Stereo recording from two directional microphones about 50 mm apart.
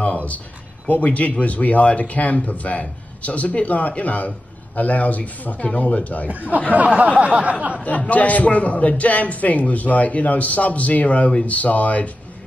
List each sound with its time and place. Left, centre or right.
0.0 s a sound: left
0.8 s a man's voice: left
6.7 s speech: right
8.1 s a man's voice: left